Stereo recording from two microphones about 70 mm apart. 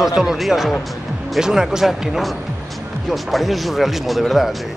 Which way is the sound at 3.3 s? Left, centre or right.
Centre.